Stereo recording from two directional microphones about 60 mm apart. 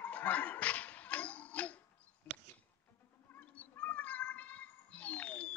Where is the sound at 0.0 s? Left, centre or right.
Left.